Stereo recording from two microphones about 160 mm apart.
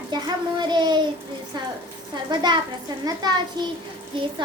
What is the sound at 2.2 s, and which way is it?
Child singing, 25° right (ahead or behind).